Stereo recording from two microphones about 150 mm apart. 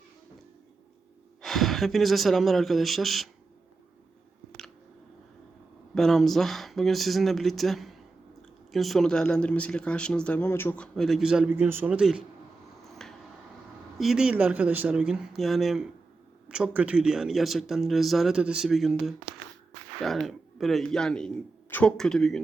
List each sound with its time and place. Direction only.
1.4 s speech: centre (ahead or behind)
5.9 s speech: centre (ahead or behind)
10.9 s speech: centre (ahead or behind)
12.9 s a sound: 5° left (ahead or behind)
14.0 s speech: 5° right (ahead or behind)